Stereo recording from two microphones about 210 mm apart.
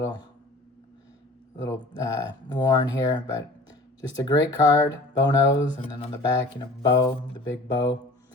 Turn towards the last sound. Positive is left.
turn(degrees=20)  # may be behind; listen again after turning